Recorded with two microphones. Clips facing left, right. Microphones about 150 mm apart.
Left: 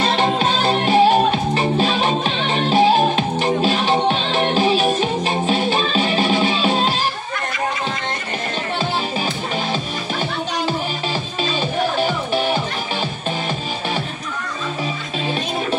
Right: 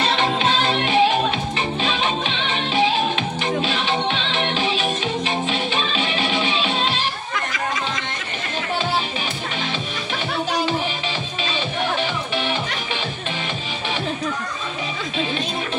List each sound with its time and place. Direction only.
0.1 s music: 40° left (ahead or behind)
12.0 s music: 40° left (ahead or behind)